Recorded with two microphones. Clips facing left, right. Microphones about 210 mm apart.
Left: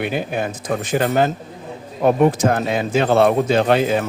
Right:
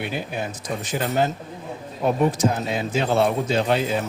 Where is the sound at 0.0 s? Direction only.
65° left (ahead or behind).